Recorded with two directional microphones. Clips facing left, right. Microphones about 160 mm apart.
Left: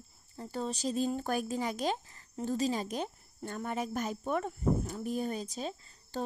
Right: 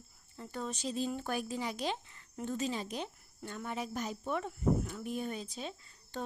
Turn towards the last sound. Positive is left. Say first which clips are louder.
# left 4 dB
turn(degrees=40)  # may be behind; listen again after turning